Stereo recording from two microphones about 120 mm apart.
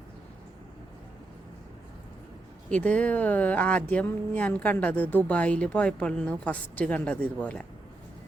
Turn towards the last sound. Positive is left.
turn(degrees=10)  # may be behind; listen again after turning